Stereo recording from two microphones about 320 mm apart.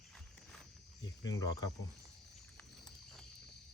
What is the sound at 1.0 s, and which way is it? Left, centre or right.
Speech, left.